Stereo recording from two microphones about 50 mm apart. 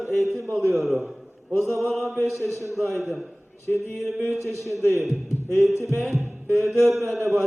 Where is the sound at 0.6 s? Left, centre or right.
Centre.